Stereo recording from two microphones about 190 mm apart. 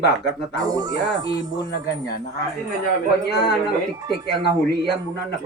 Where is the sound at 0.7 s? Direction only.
20° right (ahead or behind).